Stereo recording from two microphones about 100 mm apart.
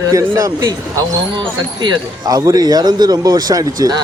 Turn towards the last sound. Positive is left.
turn(degrees=-35)  # may be behind; listen again after turning